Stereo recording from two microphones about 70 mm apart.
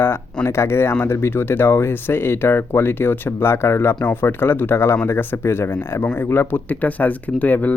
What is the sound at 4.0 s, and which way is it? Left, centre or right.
Speech, left.